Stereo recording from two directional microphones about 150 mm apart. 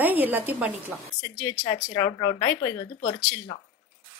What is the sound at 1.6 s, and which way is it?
Speech, 30° left (ahead or behind).